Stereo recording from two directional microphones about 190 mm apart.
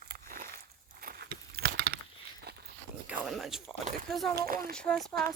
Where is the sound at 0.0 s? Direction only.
50° right (ahead or behind).